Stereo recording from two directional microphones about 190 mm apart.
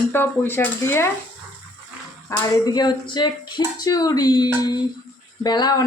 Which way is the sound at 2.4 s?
20° left (ahead or behind).